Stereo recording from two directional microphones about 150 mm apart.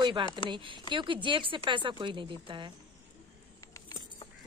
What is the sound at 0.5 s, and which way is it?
Speech, 30° right (ahead or behind).